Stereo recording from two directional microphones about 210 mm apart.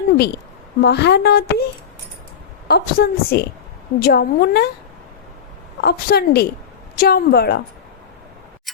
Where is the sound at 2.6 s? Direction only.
50° left (ahead or behind).